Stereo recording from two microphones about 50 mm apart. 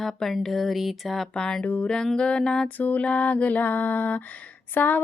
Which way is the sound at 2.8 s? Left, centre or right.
Left.